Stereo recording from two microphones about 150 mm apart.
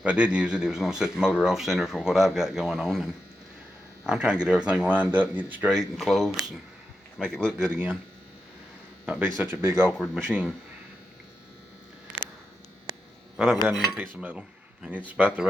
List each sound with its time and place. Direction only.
0.0 s speech: 10° right (ahead or behind)
7.7 s speech: 10° right (ahead or behind)
9.0 s speech: 10° right (ahead or behind)
13.3 s speech: centre (ahead or behind)